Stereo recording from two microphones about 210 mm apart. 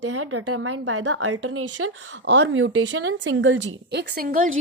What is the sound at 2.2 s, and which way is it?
A woman's voice, 55° right (ahead or behind).